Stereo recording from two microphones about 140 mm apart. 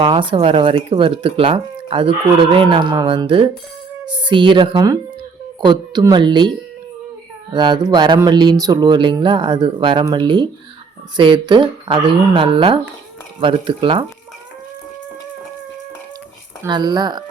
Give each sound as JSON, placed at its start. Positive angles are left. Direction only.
{"t": 0.0, "sound": "speech", "side_deg": -35}
{"t": 7.5, "sound": "speech", "side_deg": -30}
{"t": 16.6, "sound": "speech", "side_deg": -30}